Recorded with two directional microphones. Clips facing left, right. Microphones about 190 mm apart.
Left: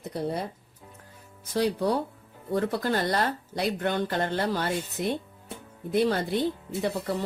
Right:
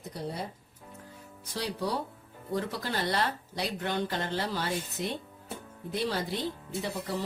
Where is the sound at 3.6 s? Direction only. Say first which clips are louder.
Left 5 dB; 55° left (ahead or behind).